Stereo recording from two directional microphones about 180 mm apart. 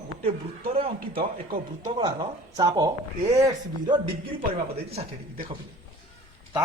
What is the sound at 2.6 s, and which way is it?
Speech, 20° right (ahead or behind).